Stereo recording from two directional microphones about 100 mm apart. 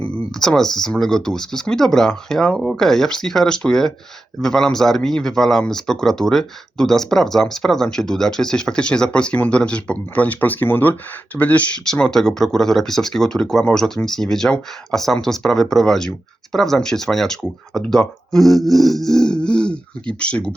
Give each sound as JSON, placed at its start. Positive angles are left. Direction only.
{"t": 0.0, "sound": "speech", "side_deg": 5}